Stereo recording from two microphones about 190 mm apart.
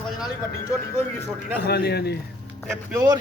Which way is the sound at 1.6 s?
55° left (ahead or behind).